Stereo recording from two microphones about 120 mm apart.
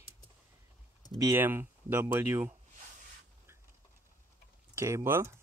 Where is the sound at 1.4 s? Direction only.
15° right (ahead or behind).